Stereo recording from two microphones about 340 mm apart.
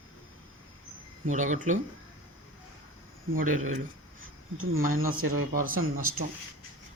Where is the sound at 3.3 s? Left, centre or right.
Right.